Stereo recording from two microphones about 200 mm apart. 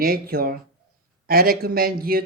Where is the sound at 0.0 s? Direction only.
50° right (ahead or behind).